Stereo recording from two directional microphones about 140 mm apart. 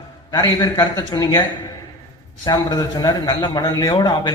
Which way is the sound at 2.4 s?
25° left (ahead or behind).